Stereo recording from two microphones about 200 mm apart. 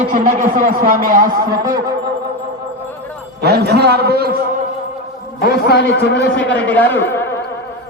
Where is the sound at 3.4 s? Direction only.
55° right (ahead or behind).